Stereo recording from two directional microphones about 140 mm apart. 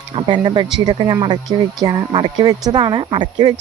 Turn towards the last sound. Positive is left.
turn(degrees=-35)  # may be behind; listen again after turning